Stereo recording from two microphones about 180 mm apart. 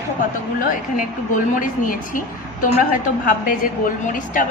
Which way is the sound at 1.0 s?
45° left (ahead or behind).